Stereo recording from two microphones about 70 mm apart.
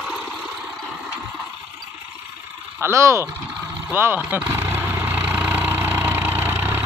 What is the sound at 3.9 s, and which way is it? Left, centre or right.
Vehicle, right.